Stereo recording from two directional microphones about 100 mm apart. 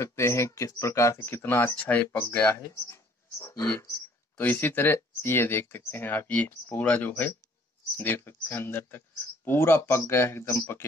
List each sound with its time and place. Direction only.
0.0 s speech: 30° left (ahead or behind)
2.5 s speech: 25° left (ahead or behind)
4.4 s speech: 20° left (ahead or behind)